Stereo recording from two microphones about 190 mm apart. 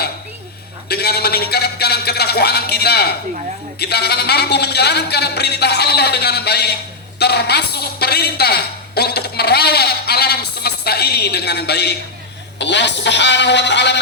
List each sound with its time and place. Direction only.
0.9 s a woman's voice: 55° left (ahead or behind)